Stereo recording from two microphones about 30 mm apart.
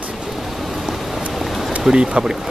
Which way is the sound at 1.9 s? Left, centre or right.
Right.